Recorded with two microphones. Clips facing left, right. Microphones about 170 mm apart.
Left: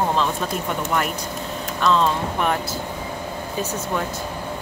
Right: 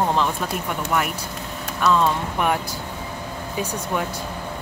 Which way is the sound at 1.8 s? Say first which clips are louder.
Even; 10° right (ahead or behind).